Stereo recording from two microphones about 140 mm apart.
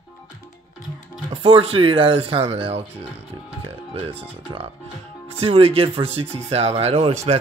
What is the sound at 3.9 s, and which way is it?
Speech, 40° right (ahead or behind).